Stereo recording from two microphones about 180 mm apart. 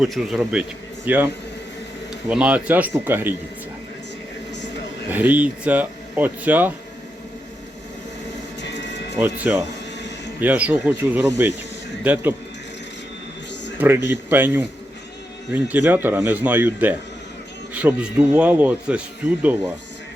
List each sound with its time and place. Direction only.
0.0 s a man's voice: centre (ahead or behind)
2.3 s speech: 5° right (ahead or behind)
5.0 s speech: 10° right (ahead or behind)
8.6 s music: 75° left (ahead or behind)
9.1 s speech: 10° right (ahead or behind)
13.7 s speech: 10° right (ahead or behind)